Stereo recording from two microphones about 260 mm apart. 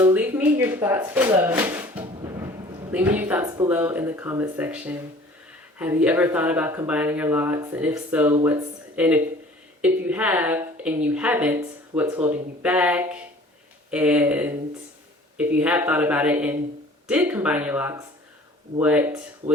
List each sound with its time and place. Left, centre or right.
0.0 s a sound: centre
1.4 s music: centre
2.9 s speech: centre
15.5 s speech: centre